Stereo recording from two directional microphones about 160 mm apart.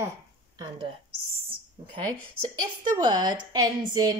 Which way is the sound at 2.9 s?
25° right (ahead or behind).